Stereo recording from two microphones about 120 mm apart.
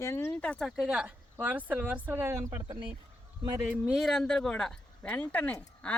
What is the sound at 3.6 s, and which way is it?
Speech, 10° right (ahead or behind).